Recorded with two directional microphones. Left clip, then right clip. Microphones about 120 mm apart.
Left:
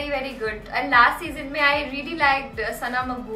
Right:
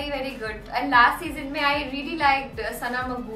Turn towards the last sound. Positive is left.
turn(degrees=0)  # may be behind; listen again after turning